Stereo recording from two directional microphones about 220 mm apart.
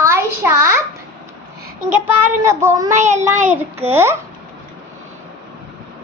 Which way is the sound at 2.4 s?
10° right (ahead or behind).